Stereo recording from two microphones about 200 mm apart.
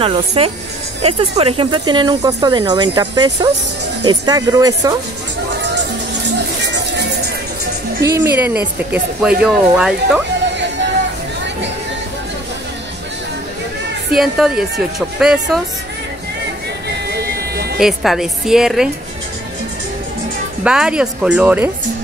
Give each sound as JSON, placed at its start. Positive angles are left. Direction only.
{"t": 0.0, "sound": "speech", "side_deg": -30}
{"t": 6.6, "sound": "music", "side_deg": -60}
{"t": 8.0, "sound": "speech", "side_deg": -10}
{"t": 14.1, "sound": "speech", "side_deg": 0}
{"t": 17.1, "sound": "music", "side_deg": -50}
{"t": 17.7, "sound": "speech", "side_deg": 0}
{"t": 20.6, "sound": "speech", "side_deg": -5}